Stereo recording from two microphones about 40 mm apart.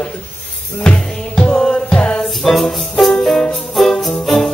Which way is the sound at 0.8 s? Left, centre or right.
Left.